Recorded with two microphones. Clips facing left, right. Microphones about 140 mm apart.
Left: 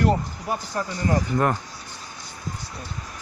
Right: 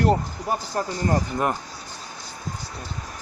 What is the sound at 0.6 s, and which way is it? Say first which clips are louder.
Speech: right 1 dB; 35° right (ahead or behind).